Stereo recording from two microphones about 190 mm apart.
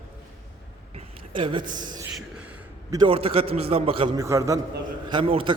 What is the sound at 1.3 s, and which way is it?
Speech, 25° right (ahead or behind).